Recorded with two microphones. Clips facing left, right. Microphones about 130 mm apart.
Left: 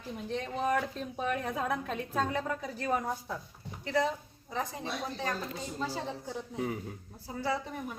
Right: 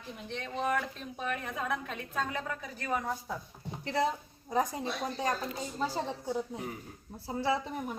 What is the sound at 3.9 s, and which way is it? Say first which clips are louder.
Speech: even; 30° right (ahead or behind).